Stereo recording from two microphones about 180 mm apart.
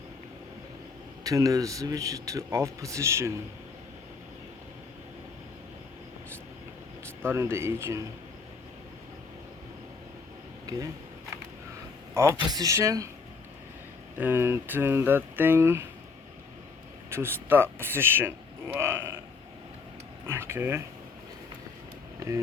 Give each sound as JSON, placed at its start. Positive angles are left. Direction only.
{"t": 1.2, "sound": "a man's voice", "side_deg": -20}
{"t": 7.2, "sound": "speech", "side_deg": -15}
{"t": 10.7, "sound": "speech", "side_deg": -20}
{"t": 12.1, "sound": "a man's voice", "side_deg": -15}
{"t": 14.2, "sound": "speech", "side_deg": -10}
{"t": 17.1, "sound": "speech", "side_deg": -15}
{"t": 20.2, "sound": "speech", "side_deg": -15}